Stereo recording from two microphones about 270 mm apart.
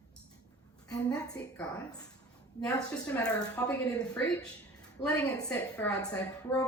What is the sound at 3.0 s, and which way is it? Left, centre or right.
A woman's voice, centre.